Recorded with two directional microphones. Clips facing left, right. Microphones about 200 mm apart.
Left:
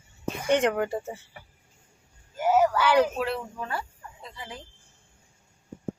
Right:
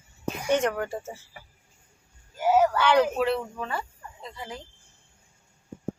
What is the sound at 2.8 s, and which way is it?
Speech, 5° left (ahead or behind).